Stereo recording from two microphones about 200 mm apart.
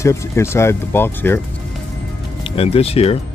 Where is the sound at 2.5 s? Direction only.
30° left (ahead or behind).